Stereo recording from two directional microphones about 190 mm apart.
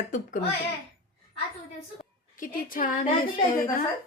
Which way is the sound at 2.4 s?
45° left (ahead or behind).